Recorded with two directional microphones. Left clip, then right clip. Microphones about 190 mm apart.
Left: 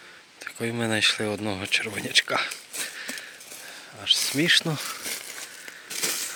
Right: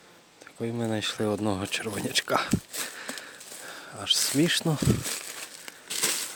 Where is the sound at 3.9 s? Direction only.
35° right (ahead or behind).